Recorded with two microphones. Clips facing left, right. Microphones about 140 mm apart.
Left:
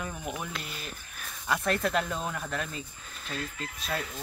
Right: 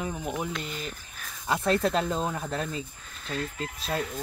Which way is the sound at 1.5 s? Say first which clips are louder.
Right 3 dB; 25° right (ahead or behind).